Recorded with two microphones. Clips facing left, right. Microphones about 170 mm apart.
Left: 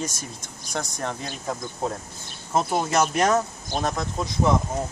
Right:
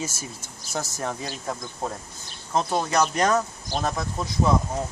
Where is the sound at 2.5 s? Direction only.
10° left (ahead or behind).